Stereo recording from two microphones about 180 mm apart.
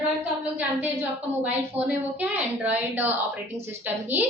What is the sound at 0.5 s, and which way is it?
A woman's voice, 10° right (ahead or behind).